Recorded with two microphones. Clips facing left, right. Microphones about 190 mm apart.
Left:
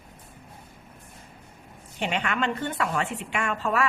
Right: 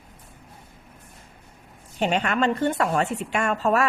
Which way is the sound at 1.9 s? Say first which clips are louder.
Right 5 dB; 40° right (ahead or behind).